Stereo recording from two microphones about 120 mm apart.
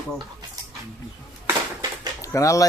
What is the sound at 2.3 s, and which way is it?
Speech, 25° left (ahead or behind).